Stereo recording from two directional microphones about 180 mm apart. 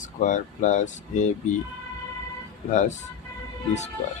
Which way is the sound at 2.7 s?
40° left (ahead or behind).